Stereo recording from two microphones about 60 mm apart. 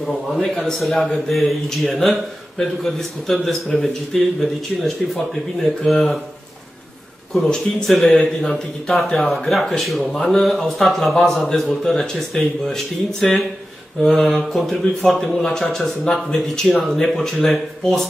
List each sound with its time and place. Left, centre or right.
0.0 s a man's voice: centre
7.3 s a man's voice: centre